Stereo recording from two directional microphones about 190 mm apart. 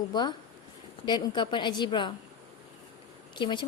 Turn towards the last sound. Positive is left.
turn(degrees=25)  # may be behind; listen again after turning